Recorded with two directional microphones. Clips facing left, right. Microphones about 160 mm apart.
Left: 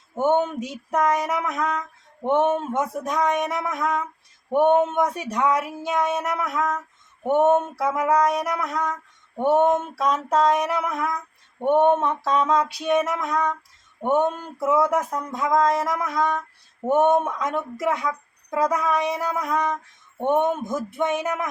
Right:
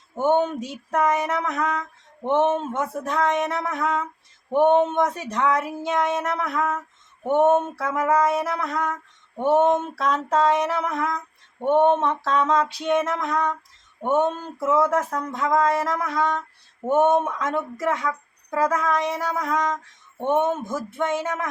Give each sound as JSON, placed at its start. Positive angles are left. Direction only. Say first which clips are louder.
{"t": 0.2, "sound": "speech", "louder": "even", "side_deg": 5}
{"t": 0.9, "sound": "a sound", "louder": "even", "side_deg": -5}
{"t": 1.3, "sound": "speech", "louder": "even", "side_deg": 10}
{"t": 2.7, "sound": "speech", "louder": "left 1 dB", "side_deg": 15}